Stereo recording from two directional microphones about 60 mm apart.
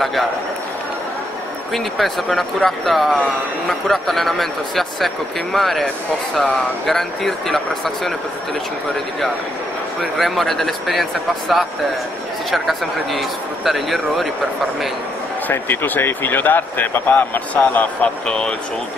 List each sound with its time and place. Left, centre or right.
1.7 s a man's voice: centre
10.1 s a man's voice: centre
15.5 s speech: left
18.2 s speech: centre